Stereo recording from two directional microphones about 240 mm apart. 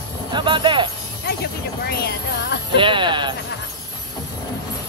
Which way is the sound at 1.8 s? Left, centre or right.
Left.